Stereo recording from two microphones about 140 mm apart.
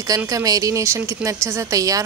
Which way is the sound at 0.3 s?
25° right (ahead or behind).